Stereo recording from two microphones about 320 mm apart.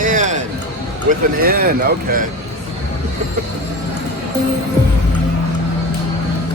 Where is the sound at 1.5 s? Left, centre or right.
Right.